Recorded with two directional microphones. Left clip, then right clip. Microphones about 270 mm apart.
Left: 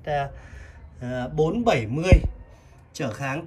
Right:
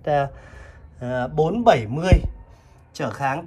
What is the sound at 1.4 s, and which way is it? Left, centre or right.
Speech, right.